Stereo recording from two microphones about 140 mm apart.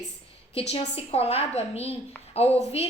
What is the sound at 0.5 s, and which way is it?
A woman's voice, 45° left (ahead or behind).